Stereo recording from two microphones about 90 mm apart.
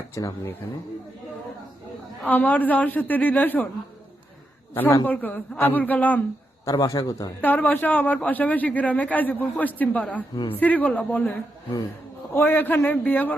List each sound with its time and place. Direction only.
0.1 s a man's voice: 35° left (ahead or behind)
2.2 s a man's voice: 20° left (ahead or behind)
5.0 s a man's voice: 20° left (ahead or behind)
6.7 s a man's voice: 40° left (ahead or behind)
7.4 s a man's voice: 20° left (ahead or behind)
10.3 s speech: 65° left (ahead or behind)
10.6 s a man's voice: 15° left (ahead or behind)